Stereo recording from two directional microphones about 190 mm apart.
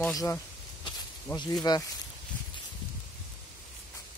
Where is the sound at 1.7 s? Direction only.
20° left (ahead or behind).